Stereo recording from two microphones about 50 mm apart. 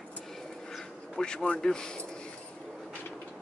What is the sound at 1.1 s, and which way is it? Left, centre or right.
Speech, centre.